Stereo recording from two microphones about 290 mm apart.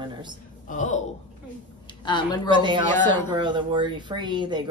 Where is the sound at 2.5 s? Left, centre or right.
Centre.